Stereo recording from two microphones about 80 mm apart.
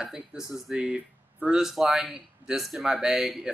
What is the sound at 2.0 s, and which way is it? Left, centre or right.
Speech, centre.